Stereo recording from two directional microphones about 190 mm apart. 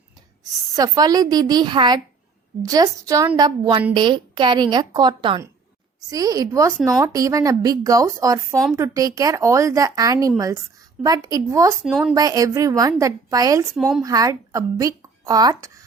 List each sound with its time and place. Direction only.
0.8 s speech: 20° right (ahead or behind)
11.8 s speech: centre (ahead or behind)
12.1 s speech: 20° right (ahead or behind)
13.7 s speech: centre (ahead or behind)
14.0 s speech: 20° right (ahead or behind)